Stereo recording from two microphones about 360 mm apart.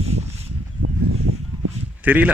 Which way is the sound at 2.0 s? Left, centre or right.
Centre.